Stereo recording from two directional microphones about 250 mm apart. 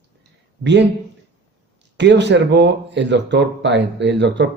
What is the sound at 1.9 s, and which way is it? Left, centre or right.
Speech, right.